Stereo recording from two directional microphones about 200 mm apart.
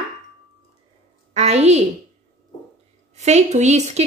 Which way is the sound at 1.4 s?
30° right (ahead or behind).